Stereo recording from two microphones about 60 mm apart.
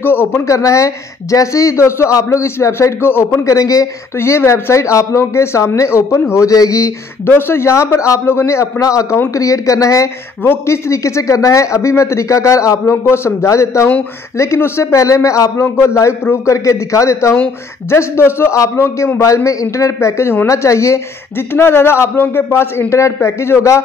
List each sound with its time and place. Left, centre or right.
0.0 s speech: left
0.3 s a man's voice: left
4.2 s a man's voice: left
6.4 s a man's voice: left
7.2 s a man's voice: left
10.4 s a man's voice: left
13.0 s a man's voice: left
15.6 s a man's voice: left
19.1 s a man's voice: left
21.5 s a man's voice: left